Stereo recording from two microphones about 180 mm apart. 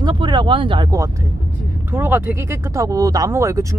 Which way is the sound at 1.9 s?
10° right (ahead or behind).